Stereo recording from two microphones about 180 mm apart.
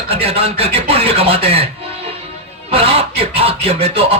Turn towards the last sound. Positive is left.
turn(degrees=-35)  # may be behind; listen again after turning